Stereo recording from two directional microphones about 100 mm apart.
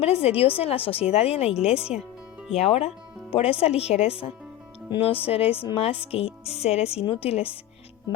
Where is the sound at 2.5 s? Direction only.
90° left.